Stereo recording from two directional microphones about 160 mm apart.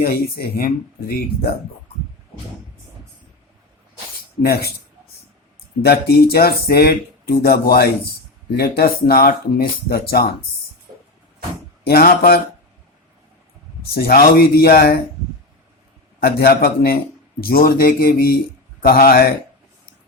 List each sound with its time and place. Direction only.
0.0 s speech: 75° left (ahead or behind)
4.4 s speech: 75° left (ahead or behind)
5.8 s speech: 75° left (ahead or behind)
11.9 s speech: 65° left (ahead or behind)
13.9 s speech: 70° left (ahead or behind)
16.2 s a man's voice: 75° left (ahead or behind)